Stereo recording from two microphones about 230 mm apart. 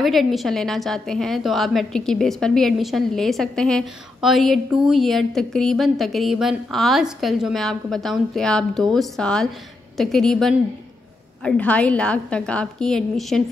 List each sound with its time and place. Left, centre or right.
0.0 s a woman's voice: centre